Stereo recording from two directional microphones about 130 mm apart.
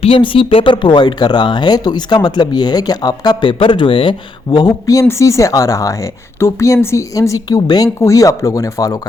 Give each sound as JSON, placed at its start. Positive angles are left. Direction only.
{"t": 0.0, "sound": "speech", "side_deg": 45}